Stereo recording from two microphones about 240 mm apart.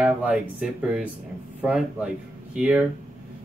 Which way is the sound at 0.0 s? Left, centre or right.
Centre.